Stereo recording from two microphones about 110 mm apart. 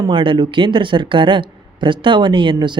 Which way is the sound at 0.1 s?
50° right (ahead or behind).